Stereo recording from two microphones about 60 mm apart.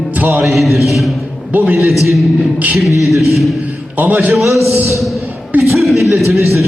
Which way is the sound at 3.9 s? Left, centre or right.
Right.